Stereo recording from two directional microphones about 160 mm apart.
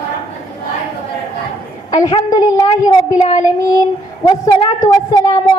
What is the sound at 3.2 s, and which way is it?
Child singing, 40° left (ahead or behind).